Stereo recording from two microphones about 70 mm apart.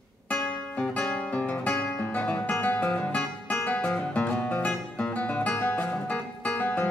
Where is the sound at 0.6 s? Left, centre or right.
Centre.